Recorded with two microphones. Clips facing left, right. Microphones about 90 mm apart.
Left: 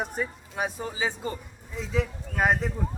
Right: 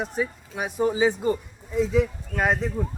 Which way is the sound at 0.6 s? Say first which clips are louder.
Right 12 dB; 15° right (ahead or behind).